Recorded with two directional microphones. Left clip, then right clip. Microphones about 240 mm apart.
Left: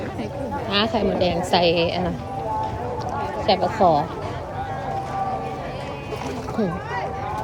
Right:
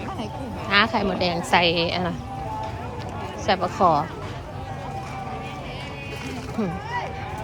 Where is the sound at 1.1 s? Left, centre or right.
Centre.